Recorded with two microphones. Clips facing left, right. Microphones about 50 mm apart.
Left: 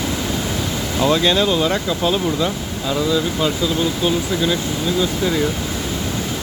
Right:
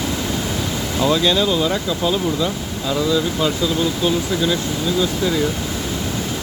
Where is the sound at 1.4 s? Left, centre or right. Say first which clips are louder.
Left 1 dB; left.